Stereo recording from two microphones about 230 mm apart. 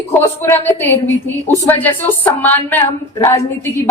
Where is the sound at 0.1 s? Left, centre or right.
Centre.